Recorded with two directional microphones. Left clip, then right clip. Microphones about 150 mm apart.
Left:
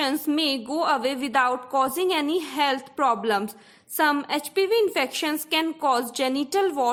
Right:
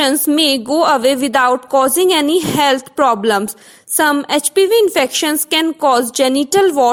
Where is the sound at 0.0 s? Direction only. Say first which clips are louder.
Right 11 dB; 40° right (ahead or behind).